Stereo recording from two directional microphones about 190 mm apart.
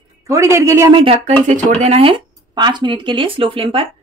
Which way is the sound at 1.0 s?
30° right (ahead or behind).